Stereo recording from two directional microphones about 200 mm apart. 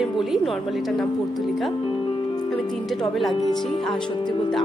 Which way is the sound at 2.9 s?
Centre (ahead or behind).